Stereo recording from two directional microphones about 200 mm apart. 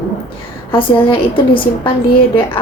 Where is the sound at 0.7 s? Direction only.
25° left (ahead or behind).